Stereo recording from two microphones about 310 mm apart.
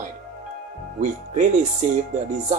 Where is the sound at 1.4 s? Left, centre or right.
Right.